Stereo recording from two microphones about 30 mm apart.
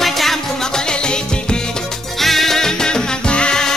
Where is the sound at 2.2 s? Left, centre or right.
Centre.